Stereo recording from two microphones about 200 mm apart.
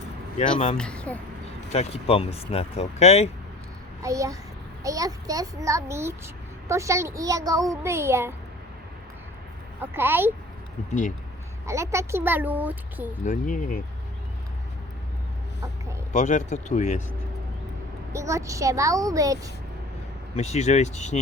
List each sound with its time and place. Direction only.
0.8 s speech: 5° left (ahead or behind)
1.7 s speech: 30° left (ahead or behind)
4.0 s a child's voice: 15° right (ahead or behind)
9.8 s a child's voice: 10° right (ahead or behind)
11.6 s a child's voice: 15° right (ahead or behind)
13.2 s speech: 40° left (ahead or behind)
16.1 s speech: 35° left (ahead or behind)
18.1 s a child's voice: 15° right (ahead or behind)
20.3 s speech: 35° left (ahead or behind)